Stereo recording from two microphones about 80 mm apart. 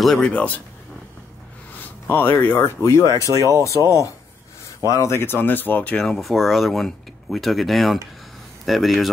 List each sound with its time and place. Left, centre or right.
0.0 s speech: centre
0.3 s speech: centre
2.0 s speech: left
3.3 s speech: right
4.8 s speech: left
5.9 s speech: centre